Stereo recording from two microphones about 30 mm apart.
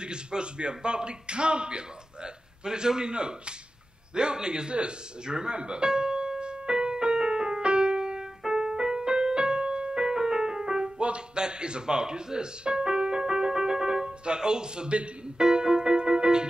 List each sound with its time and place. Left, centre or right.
0.0 s speech: right
4.1 s music: right
14.9 s speech: right
15.3 s music: right